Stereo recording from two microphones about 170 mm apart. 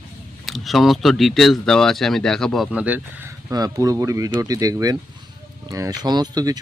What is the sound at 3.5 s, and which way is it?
Speech, 20° right (ahead or behind).